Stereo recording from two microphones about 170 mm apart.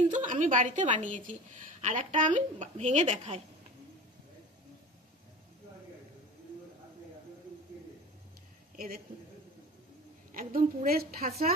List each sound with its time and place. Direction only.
0.1 s a woman's voice: 50° right (ahead or behind)
8.7 s a man's voice: 60° right (ahead or behind)
10.5 s a woman's voice: 60° right (ahead or behind)